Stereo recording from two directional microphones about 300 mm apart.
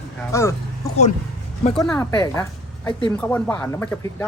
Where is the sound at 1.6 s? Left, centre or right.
Centre.